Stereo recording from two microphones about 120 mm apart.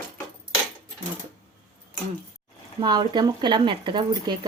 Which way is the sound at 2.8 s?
35° right (ahead or behind).